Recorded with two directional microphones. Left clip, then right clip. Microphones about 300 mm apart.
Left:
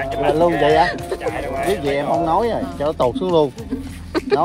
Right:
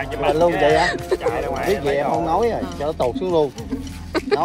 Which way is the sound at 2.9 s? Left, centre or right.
Left.